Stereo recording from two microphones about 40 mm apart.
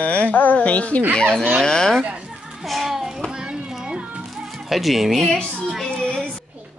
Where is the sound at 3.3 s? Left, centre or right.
Centre.